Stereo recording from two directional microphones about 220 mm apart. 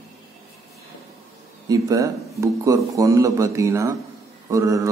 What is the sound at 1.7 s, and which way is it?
Speech, 15° right (ahead or behind).